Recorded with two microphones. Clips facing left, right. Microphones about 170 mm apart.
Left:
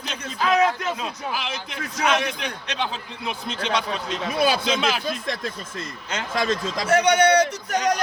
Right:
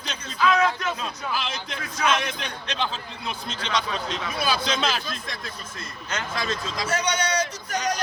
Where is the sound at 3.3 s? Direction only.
60° left (ahead or behind).